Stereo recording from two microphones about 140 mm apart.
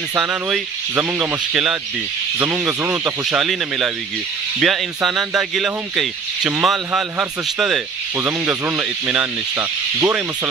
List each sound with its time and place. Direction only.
0.2 s speech: 5° right (ahead or behind)